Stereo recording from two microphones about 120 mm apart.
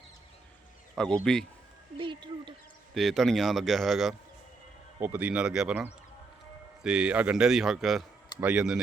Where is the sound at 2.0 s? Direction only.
40° right (ahead or behind).